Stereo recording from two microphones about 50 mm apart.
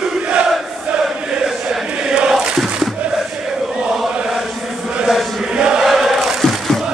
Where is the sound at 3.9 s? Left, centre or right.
Centre.